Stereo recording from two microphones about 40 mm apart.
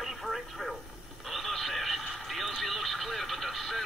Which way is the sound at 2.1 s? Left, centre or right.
Centre.